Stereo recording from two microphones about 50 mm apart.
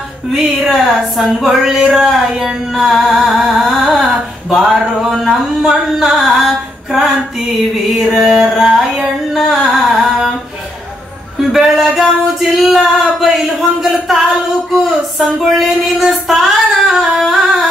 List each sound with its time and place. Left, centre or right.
0.4 s music: centre
11.5 s music: centre